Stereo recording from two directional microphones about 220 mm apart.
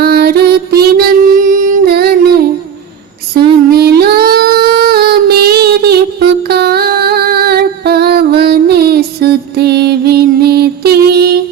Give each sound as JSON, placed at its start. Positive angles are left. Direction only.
{"t": 0.0, "sound": "music", "side_deg": -45}
{"t": 3.7, "sound": "female singing", "side_deg": -45}